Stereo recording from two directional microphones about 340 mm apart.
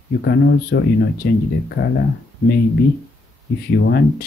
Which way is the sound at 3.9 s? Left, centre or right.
Left.